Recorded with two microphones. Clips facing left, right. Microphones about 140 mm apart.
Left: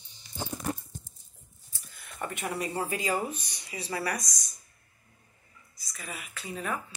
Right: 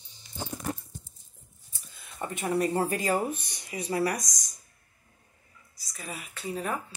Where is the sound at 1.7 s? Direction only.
25° right (ahead or behind).